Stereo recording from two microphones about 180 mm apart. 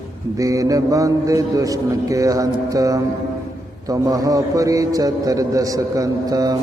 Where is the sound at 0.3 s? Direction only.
20° right (ahead or behind).